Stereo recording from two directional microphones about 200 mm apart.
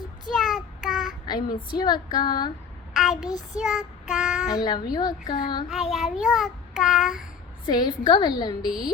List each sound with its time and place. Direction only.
0.3 s child singing: centre (ahead or behind)
1.3 s speech: 20° left (ahead or behind)
2.9 s child singing: centre (ahead or behind)
3.2 s speech: 20° left (ahead or behind)
3.6 s child singing: centre (ahead or behind)
4.4 s speech: 20° left (ahead or behind)
5.6 s child singing: centre (ahead or behind)
7.7 s speech: 20° left (ahead or behind)